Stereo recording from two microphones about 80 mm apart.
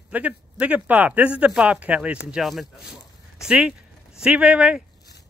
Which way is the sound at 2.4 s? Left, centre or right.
Centre.